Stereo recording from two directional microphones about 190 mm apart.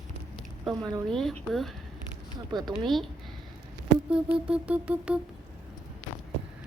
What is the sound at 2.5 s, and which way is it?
Speech, 20° right (ahead or behind).